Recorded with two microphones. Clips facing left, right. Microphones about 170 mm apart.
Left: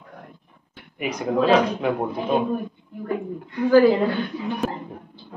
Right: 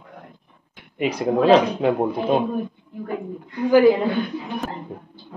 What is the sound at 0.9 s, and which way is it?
Speech, 30° right (ahead or behind).